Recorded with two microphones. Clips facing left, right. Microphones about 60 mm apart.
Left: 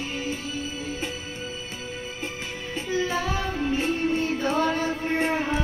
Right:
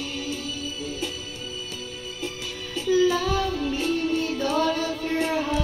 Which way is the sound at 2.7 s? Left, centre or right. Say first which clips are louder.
Right 6 dB; left.